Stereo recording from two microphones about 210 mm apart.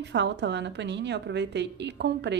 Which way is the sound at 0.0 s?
55° right (ahead or behind).